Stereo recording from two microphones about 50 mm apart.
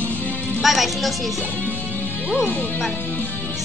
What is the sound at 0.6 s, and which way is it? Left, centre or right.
Speech, centre.